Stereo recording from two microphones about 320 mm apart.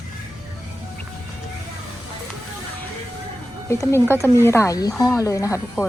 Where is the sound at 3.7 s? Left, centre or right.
Centre.